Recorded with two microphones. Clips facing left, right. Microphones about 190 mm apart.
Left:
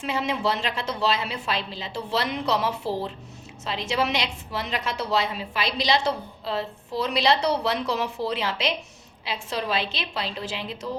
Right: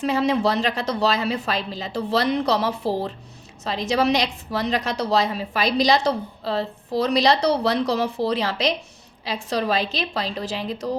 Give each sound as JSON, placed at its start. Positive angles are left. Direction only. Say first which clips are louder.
{"t": 0.0, "sound": "a woman's voice", "louder": "right 6 dB", "side_deg": -40}